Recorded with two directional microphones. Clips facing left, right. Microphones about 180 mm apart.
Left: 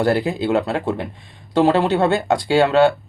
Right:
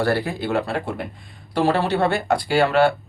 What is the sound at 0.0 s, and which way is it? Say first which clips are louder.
Speech: left 4 dB; 20° left (ahead or behind).